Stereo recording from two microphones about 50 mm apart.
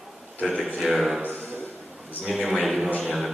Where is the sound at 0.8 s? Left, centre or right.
Centre.